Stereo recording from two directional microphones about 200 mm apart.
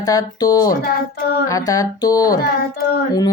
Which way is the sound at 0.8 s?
50° left (ahead or behind).